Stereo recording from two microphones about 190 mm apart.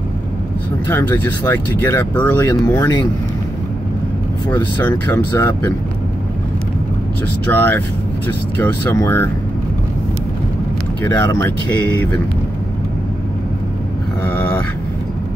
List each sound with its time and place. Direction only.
0.8 s speech: 10° left (ahead or behind)
4.5 s speech: 10° left (ahead or behind)
7.5 s speech: 10° left (ahead or behind)
11.1 s speech: 15° left (ahead or behind)